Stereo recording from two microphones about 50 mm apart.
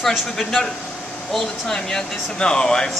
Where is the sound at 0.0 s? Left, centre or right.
Centre.